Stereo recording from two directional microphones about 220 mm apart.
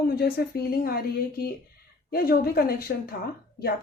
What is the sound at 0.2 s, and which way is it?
Speech, 45° left (ahead or behind).